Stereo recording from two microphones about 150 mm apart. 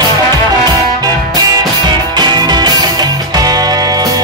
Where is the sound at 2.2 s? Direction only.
30° right (ahead or behind).